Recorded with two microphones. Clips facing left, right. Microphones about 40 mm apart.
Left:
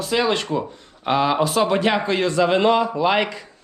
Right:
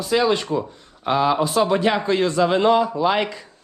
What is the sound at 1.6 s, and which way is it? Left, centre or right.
A man's voice, left.